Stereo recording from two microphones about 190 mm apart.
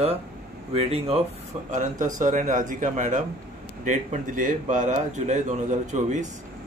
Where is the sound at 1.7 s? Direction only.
40° right (ahead or behind).